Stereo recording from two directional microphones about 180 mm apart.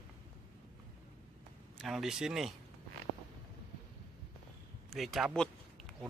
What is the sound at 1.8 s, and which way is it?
Speech, centre (ahead or behind).